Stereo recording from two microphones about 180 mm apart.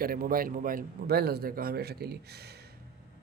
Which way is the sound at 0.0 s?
55° right (ahead or behind).